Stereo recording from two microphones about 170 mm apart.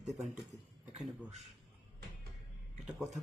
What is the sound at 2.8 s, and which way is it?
Speech, centre (ahead or behind).